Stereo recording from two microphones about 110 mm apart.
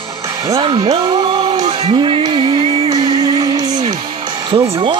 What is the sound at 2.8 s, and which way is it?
Music, 40° right (ahead or behind).